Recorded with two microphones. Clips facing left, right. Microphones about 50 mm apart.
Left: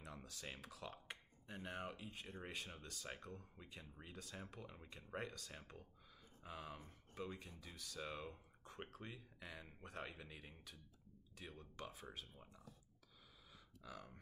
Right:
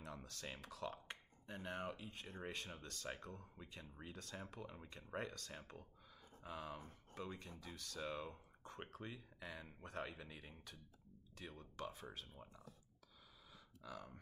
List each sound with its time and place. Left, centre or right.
0.0 s speech: centre
13.8 s speech: centre